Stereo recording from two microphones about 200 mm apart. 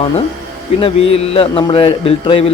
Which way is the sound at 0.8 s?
30° left (ahead or behind).